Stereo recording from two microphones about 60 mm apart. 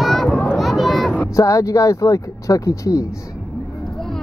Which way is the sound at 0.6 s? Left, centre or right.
Centre.